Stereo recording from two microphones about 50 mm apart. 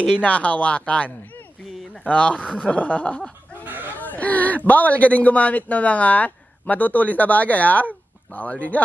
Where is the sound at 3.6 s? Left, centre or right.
Right.